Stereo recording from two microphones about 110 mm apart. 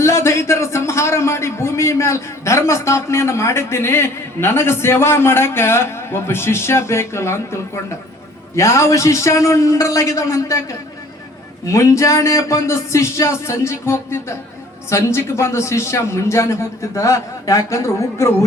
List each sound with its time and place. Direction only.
0.0 s a man's voice: 25° left (ahead or behind)
11.6 s a man's voice: 30° left (ahead or behind)